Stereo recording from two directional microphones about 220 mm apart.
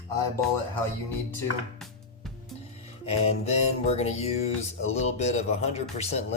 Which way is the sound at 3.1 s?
30° left (ahead or behind).